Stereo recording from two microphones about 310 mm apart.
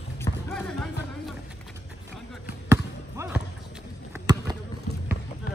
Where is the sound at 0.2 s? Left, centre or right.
Centre.